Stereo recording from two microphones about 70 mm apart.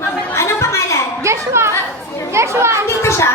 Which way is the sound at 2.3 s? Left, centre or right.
Right.